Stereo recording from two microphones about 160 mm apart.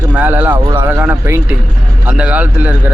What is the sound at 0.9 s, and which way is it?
Speech, 10° right (ahead or behind).